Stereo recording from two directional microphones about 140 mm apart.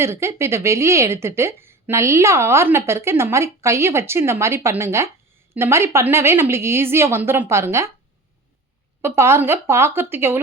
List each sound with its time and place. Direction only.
0.0 s a woman's voice: 20° right (ahead or behind)
9.0 s a woman's voice: 20° right (ahead or behind)